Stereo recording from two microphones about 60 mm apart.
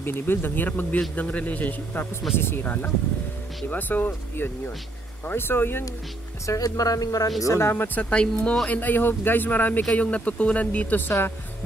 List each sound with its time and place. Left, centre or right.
0.0 s speech: left
2.3 s speech: left
6.4 s speech: left
7.4 s speech: left
8.0 s speech: centre; by 11.3 s left